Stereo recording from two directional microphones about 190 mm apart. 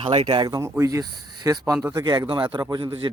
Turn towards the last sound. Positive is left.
turn(degrees=-25)  # may be behind; listen again after turning